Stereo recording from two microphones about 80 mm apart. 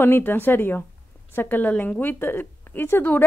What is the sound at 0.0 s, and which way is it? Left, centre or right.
A woman's voice, left.